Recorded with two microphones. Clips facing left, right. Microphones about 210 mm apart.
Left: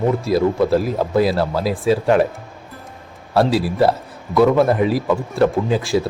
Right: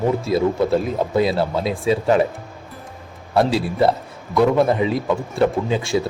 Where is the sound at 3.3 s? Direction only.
Centre (ahead or behind).